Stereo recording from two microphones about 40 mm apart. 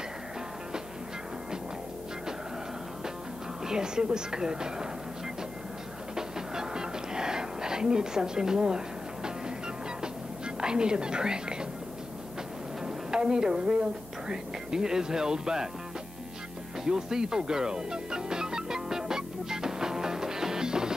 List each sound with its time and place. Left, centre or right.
3.6 s speech: centre
6.1 s music: centre
12.8 s a woman's voice: centre
16.8 s music: centre